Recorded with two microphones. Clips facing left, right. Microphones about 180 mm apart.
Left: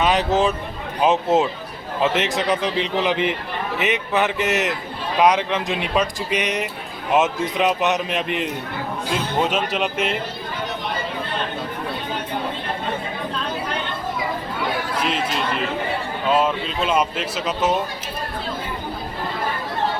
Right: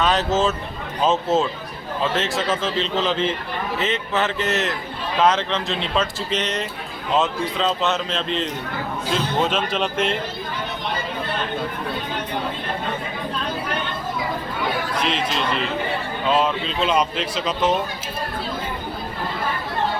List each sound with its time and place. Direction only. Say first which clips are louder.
0.0 s speech: left 1 dB; 15° left (ahead or behind)
14.9 s chatter: left 1 dB; 5° left (ahead or behind)
16.3 s speech: left 1 dB; 5° left (ahead or behind)